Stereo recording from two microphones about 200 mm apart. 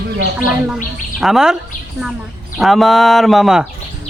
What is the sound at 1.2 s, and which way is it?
Speech, centre (ahead or behind).